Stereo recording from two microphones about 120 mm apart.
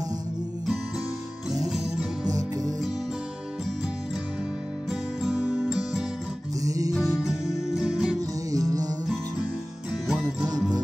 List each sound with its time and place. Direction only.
2.2 s music: 30° right (ahead or behind)
5.2 s music: 5° right (ahead or behind)
6.6 s music: 30° right (ahead or behind)
6.9 s music: centre (ahead or behind)
8.5 s music: 30° right (ahead or behind)
10.0 s music: 5° right (ahead or behind)